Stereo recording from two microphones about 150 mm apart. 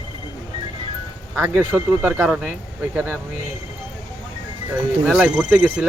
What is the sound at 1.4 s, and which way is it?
Speech, 10° right (ahead or behind).